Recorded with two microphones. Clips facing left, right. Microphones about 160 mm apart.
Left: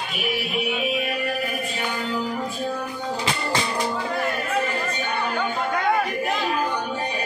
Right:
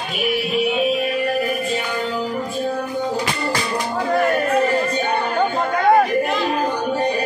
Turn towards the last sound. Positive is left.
turn(degrees=-45)  # may be behind; listen again after turning